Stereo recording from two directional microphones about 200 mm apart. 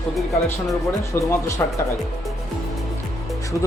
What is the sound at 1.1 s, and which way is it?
Speech, 15° left (ahead or behind).